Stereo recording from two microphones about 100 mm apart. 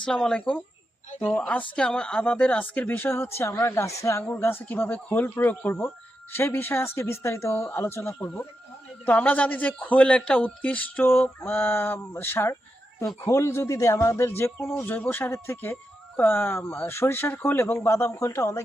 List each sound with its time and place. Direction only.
0.0 s a man's voice: 5° left (ahead or behind); by 4.2 s 30° left (ahead or behind)
4.6 s a man's voice: 20° left (ahead or behind)